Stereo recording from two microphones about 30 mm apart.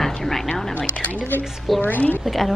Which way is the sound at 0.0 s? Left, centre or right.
Centre.